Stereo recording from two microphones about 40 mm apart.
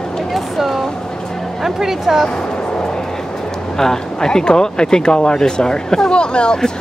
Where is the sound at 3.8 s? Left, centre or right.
Centre.